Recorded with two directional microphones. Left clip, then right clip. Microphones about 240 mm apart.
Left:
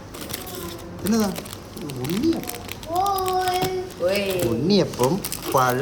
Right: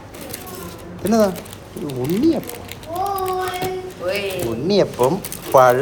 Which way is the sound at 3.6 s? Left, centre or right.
Left.